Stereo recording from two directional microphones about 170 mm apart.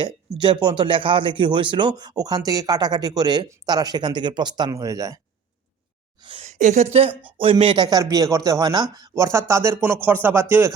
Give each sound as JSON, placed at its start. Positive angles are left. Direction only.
{"t": 0.0, "sound": "speech", "side_deg": -25}
{"t": 6.2, "sound": "a woman's voice", "side_deg": -35}
{"t": 6.9, "sound": "speech", "side_deg": -35}
{"t": 7.2, "sound": "speech", "side_deg": -10}
{"t": 7.4, "sound": "speech", "side_deg": -30}